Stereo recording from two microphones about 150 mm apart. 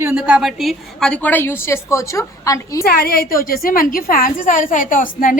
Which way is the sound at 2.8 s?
80° left.